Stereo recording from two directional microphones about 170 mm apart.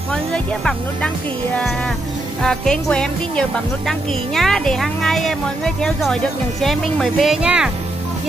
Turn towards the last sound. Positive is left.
turn(degrees=-5)  # may be behind; listen again after turning